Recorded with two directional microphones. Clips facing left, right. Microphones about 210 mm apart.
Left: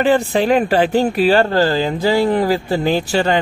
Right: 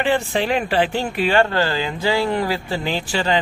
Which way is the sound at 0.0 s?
40° left (ahead or behind).